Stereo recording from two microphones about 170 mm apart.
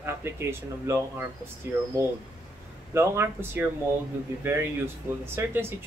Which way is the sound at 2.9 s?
15° right (ahead or behind).